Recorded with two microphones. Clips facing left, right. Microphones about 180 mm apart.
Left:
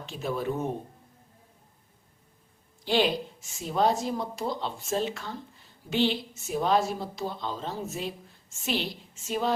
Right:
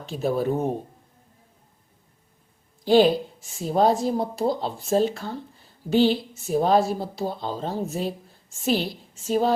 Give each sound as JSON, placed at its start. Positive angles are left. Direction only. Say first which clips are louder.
{"t": 0.0, "sound": "a woman's voice", "louder": "right 7 dB", "side_deg": -35}
{"t": 2.8, "sound": "a woman's voice", "louder": "right 8 dB", "side_deg": -40}